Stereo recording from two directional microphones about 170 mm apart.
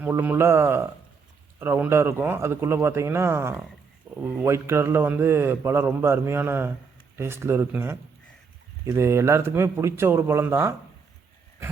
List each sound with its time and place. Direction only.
0.0 s a man's voice: 10° right (ahead or behind)
4.1 s speech: 5° right (ahead or behind)
4.4 s a man's voice: 15° right (ahead or behind)